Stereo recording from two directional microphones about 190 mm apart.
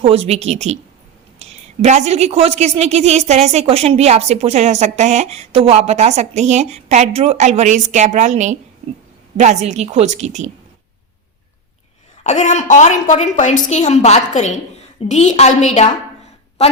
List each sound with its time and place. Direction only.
0.0 s a woman's voice: 30° right (ahead or behind)
12.2 s a woman's voice: 40° left (ahead or behind)